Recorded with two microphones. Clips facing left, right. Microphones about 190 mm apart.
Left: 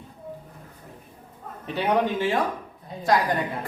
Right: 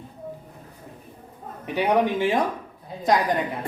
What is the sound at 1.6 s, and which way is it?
Speech, 15° right (ahead or behind).